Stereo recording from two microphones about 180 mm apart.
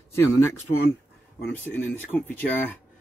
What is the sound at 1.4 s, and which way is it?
Speech, 10° left (ahead or behind).